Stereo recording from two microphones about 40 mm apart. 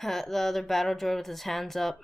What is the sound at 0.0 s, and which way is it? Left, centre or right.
A woman's voice, centre.